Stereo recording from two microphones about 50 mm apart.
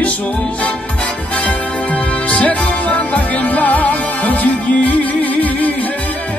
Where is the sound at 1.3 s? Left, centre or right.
Left.